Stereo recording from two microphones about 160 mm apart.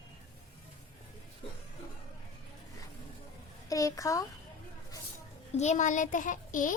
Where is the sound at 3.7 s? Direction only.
20° left (ahead or behind).